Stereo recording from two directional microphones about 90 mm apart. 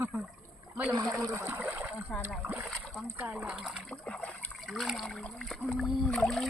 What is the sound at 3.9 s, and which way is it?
Speech, 10° left (ahead or behind).